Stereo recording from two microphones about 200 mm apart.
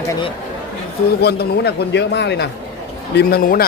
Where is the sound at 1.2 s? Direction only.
55° left (ahead or behind).